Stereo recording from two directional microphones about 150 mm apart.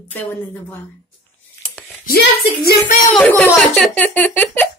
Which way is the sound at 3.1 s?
10° left (ahead or behind).